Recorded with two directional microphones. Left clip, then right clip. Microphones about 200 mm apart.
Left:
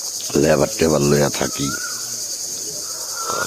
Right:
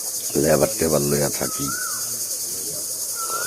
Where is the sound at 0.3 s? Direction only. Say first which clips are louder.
Left 3 dB; 20° left (ahead or behind).